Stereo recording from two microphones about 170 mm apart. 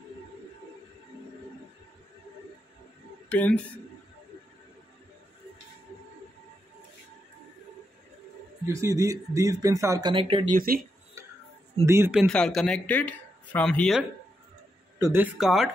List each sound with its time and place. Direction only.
3.3 s speech: 10° left (ahead or behind)
8.6 s speech: 20° right (ahead or behind)
10.5 s speech: 60° right (ahead or behind)
11.2 s tick-tock: 15° right (ahead or behind)
11.8 s speech: 15° right (ahead or behind)
12.1 s speech: centre (ahead or behind)
15.0 s speech: 15° right (ahead or behind)